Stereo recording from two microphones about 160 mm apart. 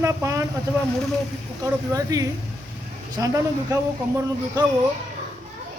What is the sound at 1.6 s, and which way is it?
A man's voice, 20° right (ahead or behind).